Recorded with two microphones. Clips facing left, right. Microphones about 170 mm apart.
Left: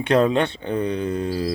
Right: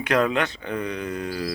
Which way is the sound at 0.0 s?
30° left (ahead or behind).